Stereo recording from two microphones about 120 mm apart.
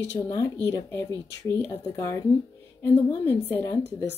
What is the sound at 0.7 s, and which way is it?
A woman's voice, 25° left (ahead or behind).